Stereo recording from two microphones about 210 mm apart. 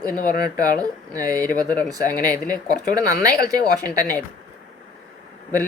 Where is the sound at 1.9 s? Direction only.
15° right (ahead or behind).